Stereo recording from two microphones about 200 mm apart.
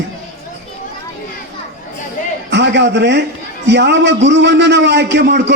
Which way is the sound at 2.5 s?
60° right (ahead or behind).